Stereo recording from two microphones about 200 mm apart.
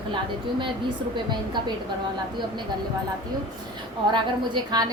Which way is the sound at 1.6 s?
25° right (ahead or behind).